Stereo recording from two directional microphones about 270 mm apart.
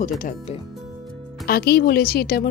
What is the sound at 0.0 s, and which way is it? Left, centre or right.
Speech, left.